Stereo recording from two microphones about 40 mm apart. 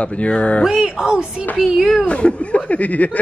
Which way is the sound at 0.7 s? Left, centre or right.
Centre.